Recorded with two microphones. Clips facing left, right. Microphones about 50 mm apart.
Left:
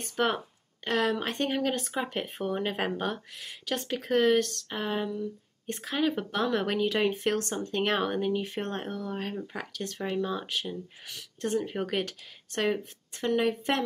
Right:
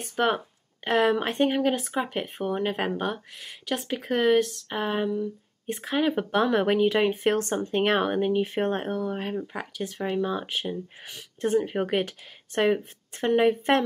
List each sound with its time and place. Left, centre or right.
0.0 s speech: centre
0.8 s speech: centre
5.2 s speech: centre
13.2 s a woman's voice: right